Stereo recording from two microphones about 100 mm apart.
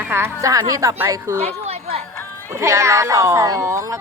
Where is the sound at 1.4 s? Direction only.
90° right.